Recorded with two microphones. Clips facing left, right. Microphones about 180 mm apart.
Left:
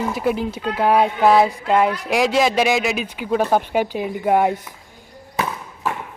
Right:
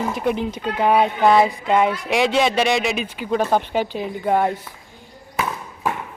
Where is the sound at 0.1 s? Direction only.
5° left (ahead or behind).